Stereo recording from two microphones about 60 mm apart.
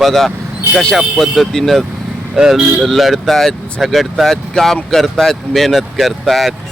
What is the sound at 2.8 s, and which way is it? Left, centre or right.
Speech, centre.